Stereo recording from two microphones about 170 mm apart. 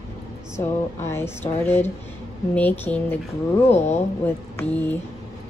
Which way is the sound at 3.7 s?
40° left (ahead or behind).